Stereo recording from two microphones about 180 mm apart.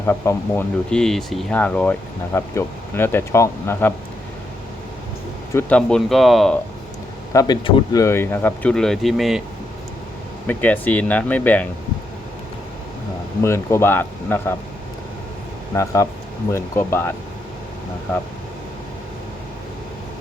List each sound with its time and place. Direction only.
0.0 s speech: 10° left (ahead or behind)
5.5 s speech: 5° left (ahead or behind)
7.3 s speech: 25° left (ahead or behind); by 9.4 s centre (ahead or behind)
10.4 s speech: 10° left (ahead or behind)
13.4 s speech: 15° left (ahead or behind)
15.7 s speech: 15° left (ahead or behind)